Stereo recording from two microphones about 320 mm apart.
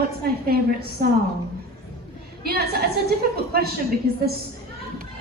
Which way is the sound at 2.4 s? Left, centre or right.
Right.